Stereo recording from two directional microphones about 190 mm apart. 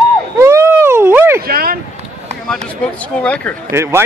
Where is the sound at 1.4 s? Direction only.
50° right (ahead or behind).